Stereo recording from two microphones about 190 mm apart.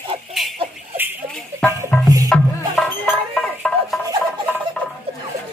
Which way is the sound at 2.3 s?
5° left (ahead or behind).